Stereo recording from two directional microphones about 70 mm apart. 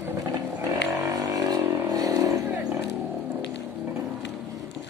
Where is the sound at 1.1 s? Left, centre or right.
Right.